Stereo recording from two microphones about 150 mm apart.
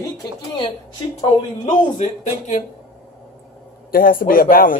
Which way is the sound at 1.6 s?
55° left (ahead or behind).